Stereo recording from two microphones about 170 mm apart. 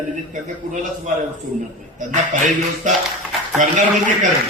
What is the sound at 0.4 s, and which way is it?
A man's voice, 50° right (ahead or behind).